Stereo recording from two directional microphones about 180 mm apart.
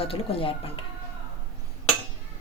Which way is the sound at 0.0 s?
30° left (ahead or behind).